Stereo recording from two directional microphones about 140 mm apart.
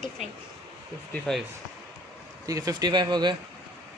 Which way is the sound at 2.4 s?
25° right (ahead or behind).